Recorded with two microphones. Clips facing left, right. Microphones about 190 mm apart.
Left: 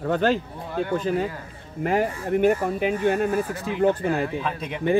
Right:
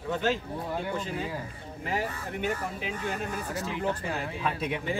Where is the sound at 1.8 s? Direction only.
55° left (ahead or behind).